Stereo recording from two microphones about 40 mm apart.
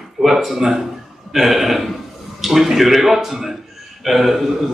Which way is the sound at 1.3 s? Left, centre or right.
Centre.